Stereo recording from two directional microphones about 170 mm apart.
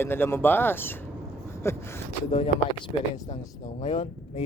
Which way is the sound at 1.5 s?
15° left (ahead or behind).